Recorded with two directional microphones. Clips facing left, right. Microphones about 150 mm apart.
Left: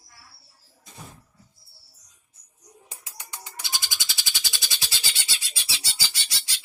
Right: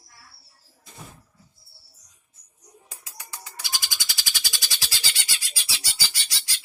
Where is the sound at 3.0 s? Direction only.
20° left (ahead or behind).